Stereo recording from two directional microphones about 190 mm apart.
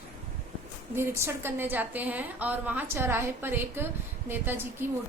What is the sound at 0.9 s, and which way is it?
A woman's voice, 15° right (ahead or behind).